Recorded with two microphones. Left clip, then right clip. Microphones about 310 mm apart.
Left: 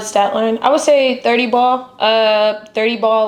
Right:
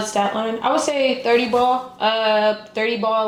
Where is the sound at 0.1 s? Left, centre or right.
Left.